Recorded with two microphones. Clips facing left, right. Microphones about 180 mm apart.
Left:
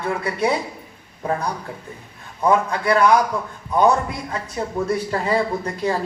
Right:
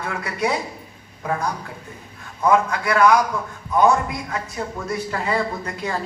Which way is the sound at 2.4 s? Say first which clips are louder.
Even; 30° left (ahead or behind).